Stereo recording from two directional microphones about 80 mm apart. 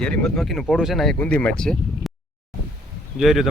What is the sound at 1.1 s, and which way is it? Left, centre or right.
Speech, centre.